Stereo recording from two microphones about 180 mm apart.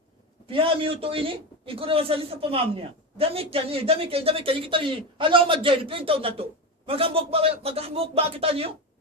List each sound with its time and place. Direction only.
0.4 s a woman's voice: 30° right (ahead or behind)